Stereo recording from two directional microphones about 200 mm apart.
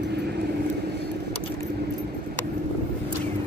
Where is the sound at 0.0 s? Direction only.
55° right (ahead or behind).